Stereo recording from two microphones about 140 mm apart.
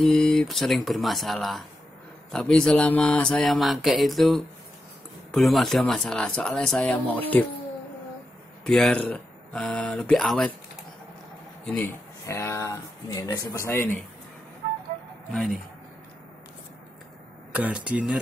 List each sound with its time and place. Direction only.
0.0 s speech: 5° left (ahead or behind)
8.6 s speech: 5° left (ahead or behind)
11.6 s speech: 15° left (ahead or behind)
15.3 s speech: centre (ahead or behind)
17.6 s speech: 10° right (ahead or behind)